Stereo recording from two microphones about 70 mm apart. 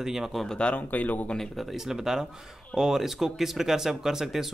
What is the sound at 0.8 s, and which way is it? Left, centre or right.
Speech, left.